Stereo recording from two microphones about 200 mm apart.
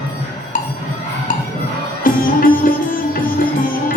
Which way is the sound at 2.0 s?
45° left (ahead or behind).